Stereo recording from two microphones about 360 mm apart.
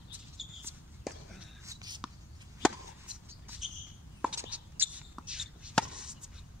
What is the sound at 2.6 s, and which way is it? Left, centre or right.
Chop, centre.